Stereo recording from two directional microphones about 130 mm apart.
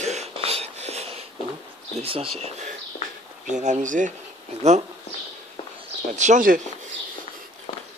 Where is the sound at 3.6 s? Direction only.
75° right (ahead or behind).